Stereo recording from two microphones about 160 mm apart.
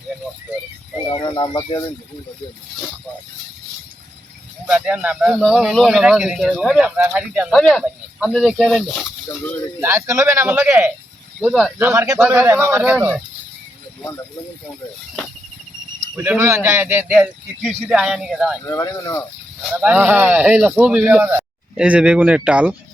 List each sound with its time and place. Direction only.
1.1 s speech: 30° left (ahead or behind)
4.6 s speech: 5° right (ahead or behind)
9.8 s speech: 15° right (ahead or behind)
16.1 s speech: 10° right (ahead or behind)
18.7 s speech: 15° left (ahead or behind)
19.8 s speech: 10° right (ahead or behind)